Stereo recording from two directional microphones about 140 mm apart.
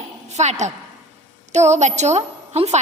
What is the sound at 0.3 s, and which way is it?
A woman's voice, 55° right (ahead or behind).